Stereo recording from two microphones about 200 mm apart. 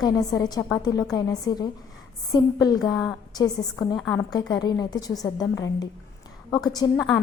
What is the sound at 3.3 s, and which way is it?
Speech, 20° left (ahead or behind).